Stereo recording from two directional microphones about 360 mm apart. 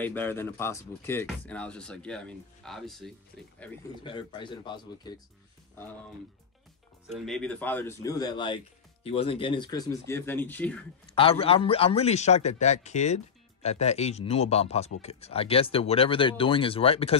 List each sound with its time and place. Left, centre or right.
0.0 s a man's voice: centre
7.1 s a man's voice: centre
11.2 s a man's voice: centre